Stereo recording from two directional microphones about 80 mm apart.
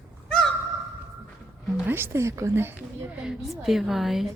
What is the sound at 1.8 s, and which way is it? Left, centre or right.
Speech, right.